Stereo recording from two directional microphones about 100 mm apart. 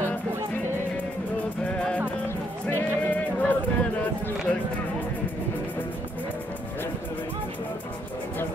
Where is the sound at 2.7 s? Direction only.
15° left (ahead or behind).